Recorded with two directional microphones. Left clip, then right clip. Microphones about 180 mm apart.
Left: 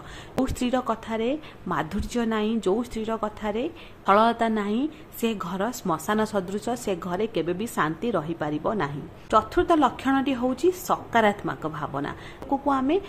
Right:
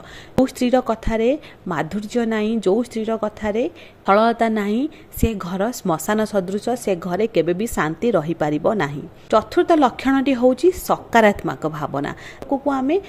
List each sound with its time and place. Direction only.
0.6 s speech: 25° right (ahead or behind)